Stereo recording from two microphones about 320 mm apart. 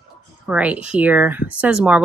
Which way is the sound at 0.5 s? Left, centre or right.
Centre.